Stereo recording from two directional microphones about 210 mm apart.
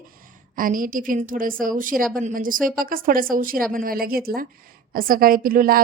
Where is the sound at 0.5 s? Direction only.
40° right (ahead or behind).